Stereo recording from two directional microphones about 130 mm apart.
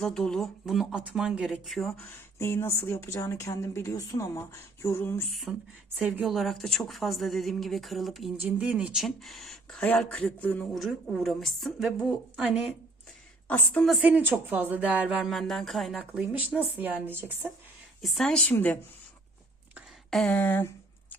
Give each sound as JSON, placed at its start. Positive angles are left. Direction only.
{"t": 0.0, "sound": "a woman's voice", "side_deg": 5}
{"t": 2.4, "sound": "a woman's voice", "side_deg": 20}
{"t": 5.5, "sound": "a woman's voice", "side_deg": -5}
{"t": 8.4, "sound": "a woman's voice", "side_deg": -10}
{"t": 13.5, "sound": "a woman's voice", "side_deg": 5}
{"t": 14.0, "sound": "speech", "side_deg": -10}
{"t": 16.7, "sound": "speech", "side_deg": -15}
{"t": 18.0, "sound": "speech", "side_deg": 5}
{"t": 20.1, "sound": "speech", "side_deg": 5}